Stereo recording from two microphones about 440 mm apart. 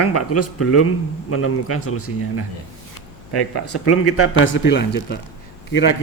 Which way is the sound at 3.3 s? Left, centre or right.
Left.